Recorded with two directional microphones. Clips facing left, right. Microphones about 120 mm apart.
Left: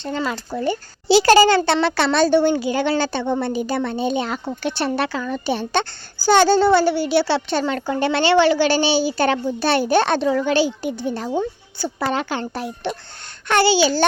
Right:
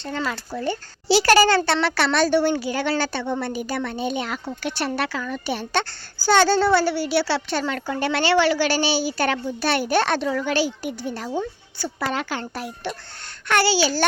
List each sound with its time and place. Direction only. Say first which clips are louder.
0.0 s speech: left 3 dB; 20° left (ahead or behind)